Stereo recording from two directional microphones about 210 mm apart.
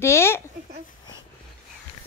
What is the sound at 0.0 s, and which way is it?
Speech, 10° left (ahead or behind).